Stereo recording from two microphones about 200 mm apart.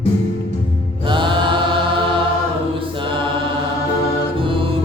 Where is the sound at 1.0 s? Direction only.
25° right (ahead or behind).